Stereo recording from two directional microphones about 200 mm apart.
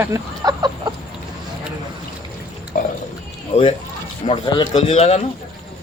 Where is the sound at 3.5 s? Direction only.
30° left (ahead or behind).